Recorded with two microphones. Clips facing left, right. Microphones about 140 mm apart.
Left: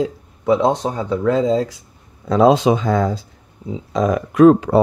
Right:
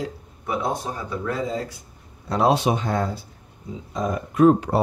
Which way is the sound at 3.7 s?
90° left.